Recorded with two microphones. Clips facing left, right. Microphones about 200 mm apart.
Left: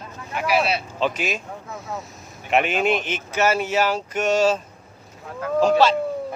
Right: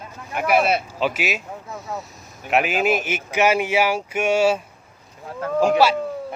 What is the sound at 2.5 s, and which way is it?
Speech, 5° right (ahead or behind).